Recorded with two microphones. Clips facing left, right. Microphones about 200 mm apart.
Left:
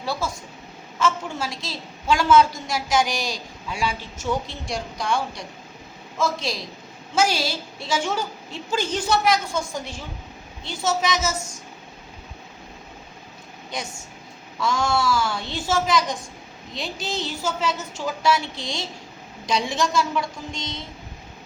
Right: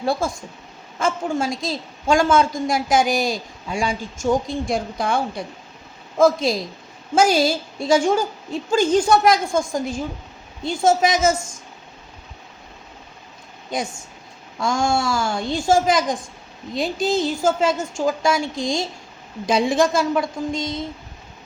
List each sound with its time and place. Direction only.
0.0 s a woman's voice: 50° right (ahead or behind)
4.7 s a woman's voice: 55° right (ahead or behind)
14.6 s a woman's voice: 45° right (ahead or behind)